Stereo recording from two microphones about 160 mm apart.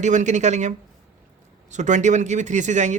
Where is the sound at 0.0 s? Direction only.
50° right (ahead or behind).